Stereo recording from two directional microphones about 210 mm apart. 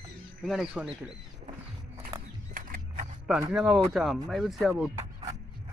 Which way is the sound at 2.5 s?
45° right (ahead or behind).